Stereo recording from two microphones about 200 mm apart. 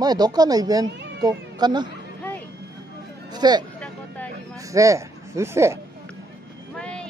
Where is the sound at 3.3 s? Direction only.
20° right (ahead or behind).